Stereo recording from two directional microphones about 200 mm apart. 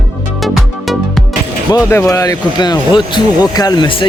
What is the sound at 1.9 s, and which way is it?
Speech, 15° left (ahead or behind).